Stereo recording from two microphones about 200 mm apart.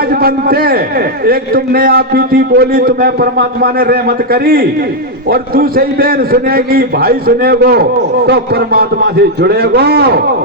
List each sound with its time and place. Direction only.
0.1 s a man's voice: 50° right (ahead or behind)